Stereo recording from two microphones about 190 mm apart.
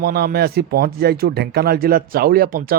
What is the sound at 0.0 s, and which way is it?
Speech, 55° right (ahead or behind).